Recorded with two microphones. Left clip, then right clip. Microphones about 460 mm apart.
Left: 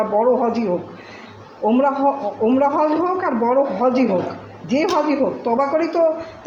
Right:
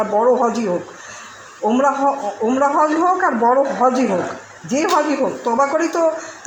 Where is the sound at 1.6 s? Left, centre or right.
Left.